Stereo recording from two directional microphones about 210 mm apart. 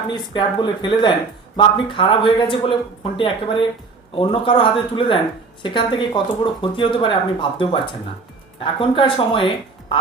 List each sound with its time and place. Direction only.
0.1 s speech: 20° left (ahead or behind)